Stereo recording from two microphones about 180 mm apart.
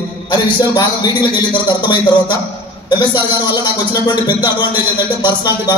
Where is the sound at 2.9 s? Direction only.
20° left (ahead or behind).